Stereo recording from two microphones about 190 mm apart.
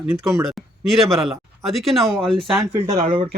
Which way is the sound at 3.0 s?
25° right (ahead or behind).